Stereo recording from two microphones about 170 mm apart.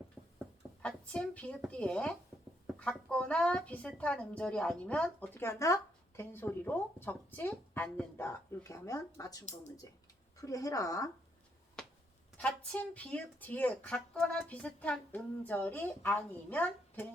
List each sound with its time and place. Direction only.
0.8 s speech: 5° left (ahead or behind)
2.7 s a sound: centre (ahead or behind)
3.1 s a woman's voice: 5° left (ahead or behind)
12.4 s speech: 5° left (ahead or behind)